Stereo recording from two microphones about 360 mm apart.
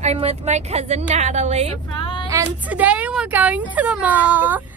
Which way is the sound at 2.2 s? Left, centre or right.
Centre.